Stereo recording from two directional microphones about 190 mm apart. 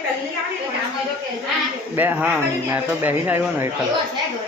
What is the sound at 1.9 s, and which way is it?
Speech, 10° right (ahead or behind).